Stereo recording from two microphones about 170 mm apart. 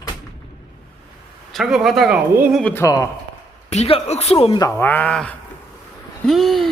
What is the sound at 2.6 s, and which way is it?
Speech, 15° left (ahead or behind).